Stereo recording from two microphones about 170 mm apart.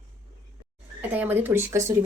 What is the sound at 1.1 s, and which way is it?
Speech, 10° right (ahead or behind).